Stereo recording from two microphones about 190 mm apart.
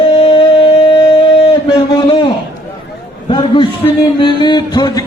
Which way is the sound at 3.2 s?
25° left (ahead or behind).